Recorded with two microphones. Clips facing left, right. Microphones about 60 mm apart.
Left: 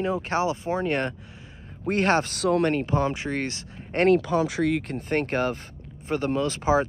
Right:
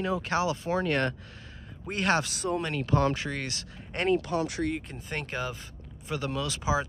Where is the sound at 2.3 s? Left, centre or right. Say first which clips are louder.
Left 7 dB; left.